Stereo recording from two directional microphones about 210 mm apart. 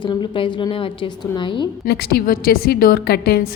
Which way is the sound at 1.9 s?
50° left (ahead or behind).